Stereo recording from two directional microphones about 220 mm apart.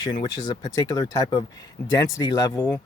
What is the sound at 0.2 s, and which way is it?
Speech, 20° left (ahead or behind).